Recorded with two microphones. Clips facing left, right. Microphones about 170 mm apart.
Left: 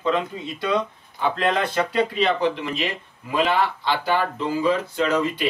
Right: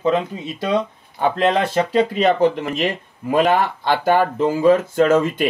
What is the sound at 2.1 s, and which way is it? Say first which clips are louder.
Speech: right 5 dB; 45° right (ahead or behind).